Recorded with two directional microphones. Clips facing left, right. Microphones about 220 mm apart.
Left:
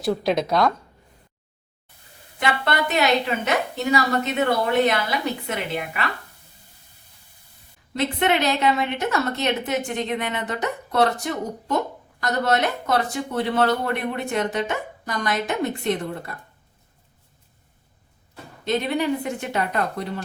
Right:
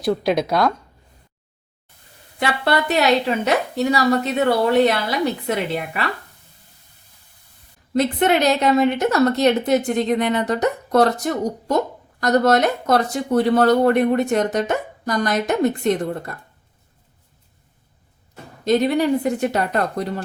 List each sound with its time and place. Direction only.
0.0 s a woman's voice: centre (ahead or behind)
2.4 s speech: 35° right (ahead or behind)
7.9 s speech: 40° right (ahead or behind)
18.6 s speech: 40° right (ahead or behind)